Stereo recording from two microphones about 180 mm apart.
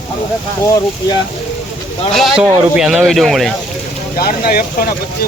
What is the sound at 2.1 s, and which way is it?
Speech, centre (ahead or behind).